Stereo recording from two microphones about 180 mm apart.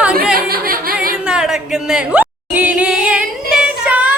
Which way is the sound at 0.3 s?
55° right (ahead or behind).